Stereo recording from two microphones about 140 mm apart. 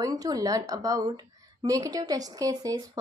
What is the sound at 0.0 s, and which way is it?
A woman's voice, 25° right (ahead or behind).